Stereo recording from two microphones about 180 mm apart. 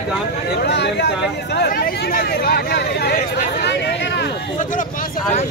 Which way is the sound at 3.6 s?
70° left (ahead or behind).